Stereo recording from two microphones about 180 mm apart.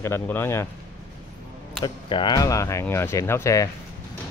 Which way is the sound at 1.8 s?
25° left (ahead or behind).